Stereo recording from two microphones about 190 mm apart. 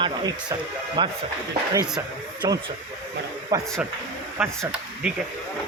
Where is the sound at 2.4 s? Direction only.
20° right (ahead or behind).